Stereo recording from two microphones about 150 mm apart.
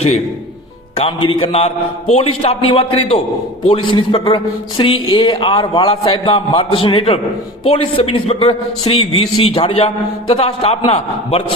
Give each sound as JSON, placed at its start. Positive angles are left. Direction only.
{"t": 0.9, "sound": "a man's voice", "side_deg": 40}